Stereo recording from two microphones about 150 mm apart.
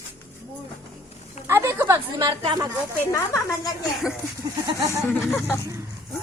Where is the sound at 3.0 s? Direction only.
20° left (ahead or behind).